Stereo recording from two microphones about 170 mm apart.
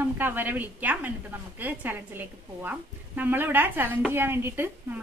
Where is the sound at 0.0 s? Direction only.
10° right (ahead or behind).